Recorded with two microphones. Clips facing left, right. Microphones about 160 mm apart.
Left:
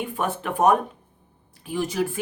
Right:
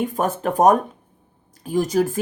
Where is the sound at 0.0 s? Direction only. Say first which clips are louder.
Right 5 dB; 40° right (ahead or behind).